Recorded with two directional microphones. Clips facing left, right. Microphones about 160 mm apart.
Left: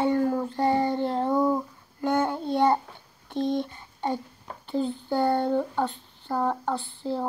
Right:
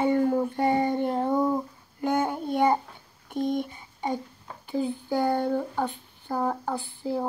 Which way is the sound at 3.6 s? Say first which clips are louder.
Left 1 dB; 10° right (ahead or behind).